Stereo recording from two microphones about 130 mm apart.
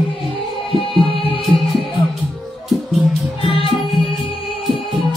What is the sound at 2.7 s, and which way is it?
Music, centre (ahead or behind).